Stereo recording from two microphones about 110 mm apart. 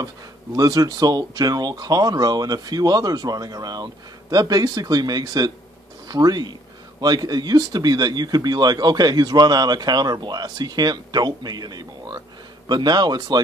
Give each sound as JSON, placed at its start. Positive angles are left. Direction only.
{"t": 0.6, "sound": "speech", "side_deg": -35}